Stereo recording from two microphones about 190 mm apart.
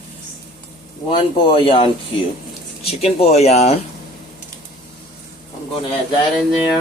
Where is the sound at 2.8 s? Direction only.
30° left (ahead or behind).